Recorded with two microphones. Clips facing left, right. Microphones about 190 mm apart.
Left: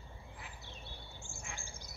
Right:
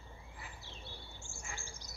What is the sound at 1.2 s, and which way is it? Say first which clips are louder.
Bird: left 1 dB; 55° left (ahead or behind).